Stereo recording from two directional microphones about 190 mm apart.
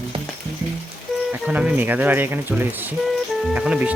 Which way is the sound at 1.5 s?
5° right (ahead or behind).